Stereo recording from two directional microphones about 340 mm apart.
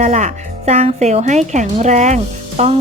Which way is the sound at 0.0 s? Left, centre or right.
Centre.